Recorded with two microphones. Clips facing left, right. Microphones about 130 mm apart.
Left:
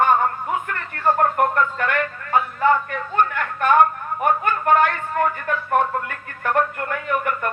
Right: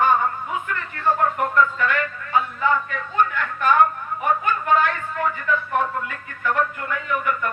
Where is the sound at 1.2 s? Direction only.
55° left (ahead or behind).